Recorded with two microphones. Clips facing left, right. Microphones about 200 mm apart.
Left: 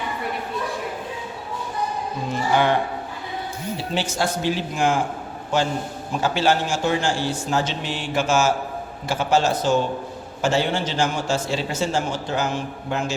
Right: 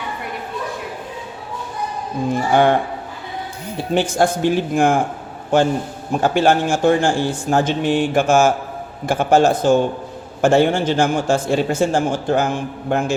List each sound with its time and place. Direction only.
2.3 s a man's voice: 50° right (ahead or behind)
3.9 s a man's voice: 55° right (ahead or behind)